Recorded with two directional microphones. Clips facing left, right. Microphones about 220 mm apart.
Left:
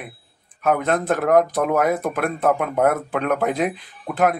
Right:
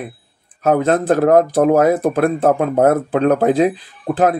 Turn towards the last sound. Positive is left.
turn(degrees=-35)  # may be behind; listen again after turning